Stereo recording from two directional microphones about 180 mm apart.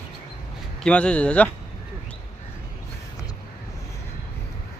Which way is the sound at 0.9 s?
5° left (ahead or behind).